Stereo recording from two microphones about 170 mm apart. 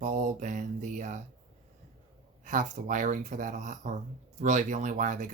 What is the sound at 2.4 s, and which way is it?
Speech, 45° right (ahead or behind).